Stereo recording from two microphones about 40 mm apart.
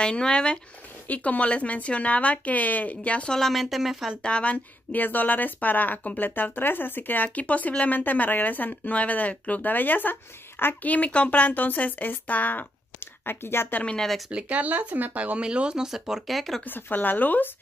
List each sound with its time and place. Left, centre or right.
0.0 s speech: left
1.0 s speech: left
3.3 s speech: centre
4.2 s speech: left
4.9 s speech: left
7.2 s speech: left
9.7 s speech: left
10.8 s speech: left
13.0 s speech: left
14.5 s speech: right
15.1 s speech: right
15.8 s speech: centre
16.6 s speech: left